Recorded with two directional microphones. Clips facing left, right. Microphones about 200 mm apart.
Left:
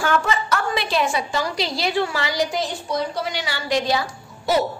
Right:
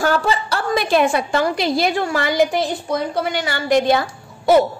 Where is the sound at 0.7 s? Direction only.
50° right (ahead or behind).